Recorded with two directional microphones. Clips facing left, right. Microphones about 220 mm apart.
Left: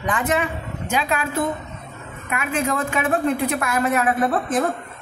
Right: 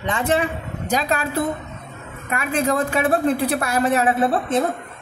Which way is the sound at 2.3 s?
35° right (ahead or behind).